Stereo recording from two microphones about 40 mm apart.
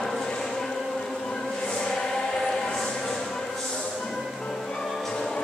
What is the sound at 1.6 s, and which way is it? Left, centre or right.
Choir, centre.